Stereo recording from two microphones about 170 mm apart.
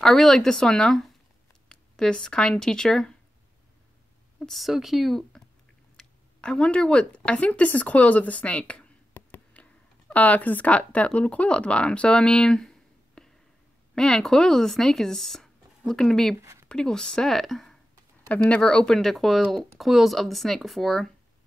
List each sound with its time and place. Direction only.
0.0 s speech: centre (ahead or behind)
4.4 s speech: centre (ahead or behind)
16.3 s speech: 15° right (ahead or behind)
16.6 s speech: 5° left (ahead or behind)